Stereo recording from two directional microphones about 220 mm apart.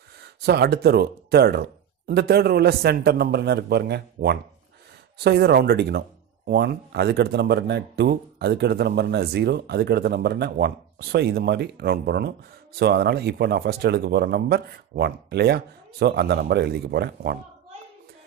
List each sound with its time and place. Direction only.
0.2 s a man's voice: 50° right (ahead or behind)